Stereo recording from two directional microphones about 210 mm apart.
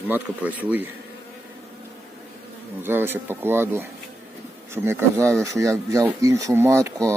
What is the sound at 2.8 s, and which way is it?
Speech, 10° right (ahead or behind).